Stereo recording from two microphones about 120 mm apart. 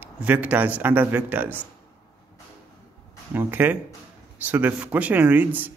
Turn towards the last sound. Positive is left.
turn(degrees=-15)  # may be behind; listen again after turning